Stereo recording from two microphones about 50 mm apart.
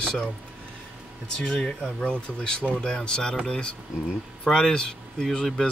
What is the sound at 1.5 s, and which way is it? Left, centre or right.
Speech, centre.